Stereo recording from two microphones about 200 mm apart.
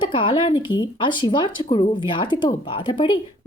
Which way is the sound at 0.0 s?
25° left (ahead or behind).